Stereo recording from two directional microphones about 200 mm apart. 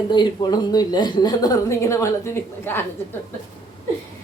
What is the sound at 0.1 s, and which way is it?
A woman's voice, 20° left (ahead or behind).